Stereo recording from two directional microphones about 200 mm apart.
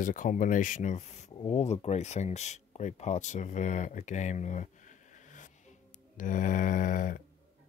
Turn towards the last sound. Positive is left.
turn(degrees=40)  # may be behind; listen again after turning